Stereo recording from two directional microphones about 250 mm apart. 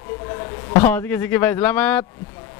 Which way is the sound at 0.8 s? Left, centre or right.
Centre.